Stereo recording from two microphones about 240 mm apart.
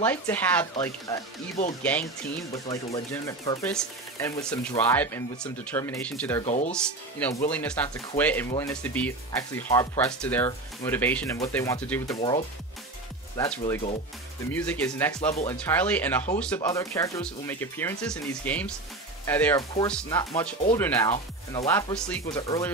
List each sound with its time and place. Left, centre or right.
0.0 s speech: centre
6.4 s speech: left
6.7 s speech: centre
12.2 s speech: left
13.4 s speech: centre